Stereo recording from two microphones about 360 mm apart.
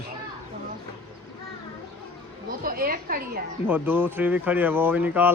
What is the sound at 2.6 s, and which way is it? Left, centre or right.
Speech, right.